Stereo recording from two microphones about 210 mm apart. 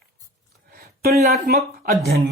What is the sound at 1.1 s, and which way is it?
Speech, 40° right (ahead or behind).